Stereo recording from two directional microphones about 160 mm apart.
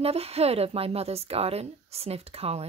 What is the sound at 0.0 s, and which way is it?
A woman's voice, 40° right (ahead or behind).